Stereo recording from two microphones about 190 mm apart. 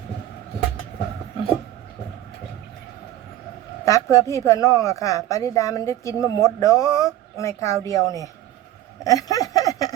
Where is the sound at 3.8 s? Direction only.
15° left (ahead or behind).